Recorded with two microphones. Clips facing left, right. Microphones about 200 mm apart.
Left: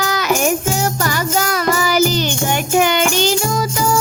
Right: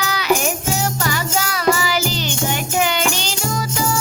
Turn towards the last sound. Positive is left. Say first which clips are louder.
# left 5 dB
turn(degrees=50)  # may be behind; listen again after turning